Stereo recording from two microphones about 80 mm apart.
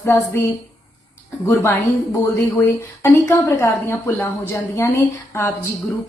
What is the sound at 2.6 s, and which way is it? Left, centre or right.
Speech, left.